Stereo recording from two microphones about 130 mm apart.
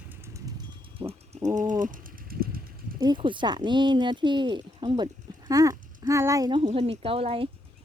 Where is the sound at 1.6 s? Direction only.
85° right.